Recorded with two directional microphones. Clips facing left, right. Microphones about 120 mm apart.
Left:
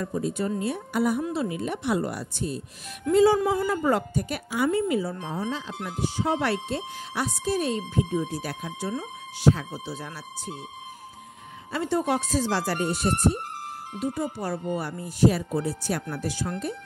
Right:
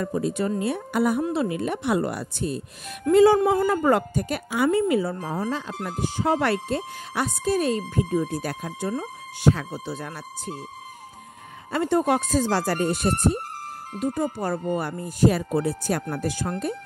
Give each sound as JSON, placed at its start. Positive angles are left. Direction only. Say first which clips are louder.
{"t": 0.0, "sound": "speech", "louder": "right 3 dB", "side_deg": -70}
{"t": 5.3, "sound": "speech", "louder": "right 3 dB", "side_deg": -50}
{"t": 9.8, "sound": "speech", "louder": "right 3 dB", "side_deg": -55}
{"t": 11.7, "sound": "speech", "louder": "right 4 dB", "side_deg": -50}